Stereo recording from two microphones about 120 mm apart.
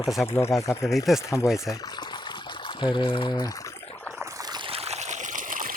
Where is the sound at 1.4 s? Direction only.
25° left (ahead or behind).